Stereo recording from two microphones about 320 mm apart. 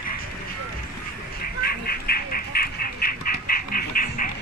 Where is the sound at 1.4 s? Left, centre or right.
Left.